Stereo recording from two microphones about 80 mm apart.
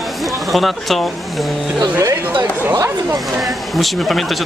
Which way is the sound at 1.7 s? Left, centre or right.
Right.